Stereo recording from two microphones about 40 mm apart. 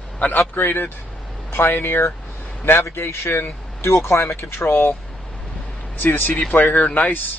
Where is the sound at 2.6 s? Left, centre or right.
Left.